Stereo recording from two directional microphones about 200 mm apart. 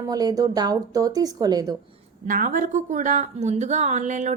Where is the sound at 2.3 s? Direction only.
40° right (ahead or behind).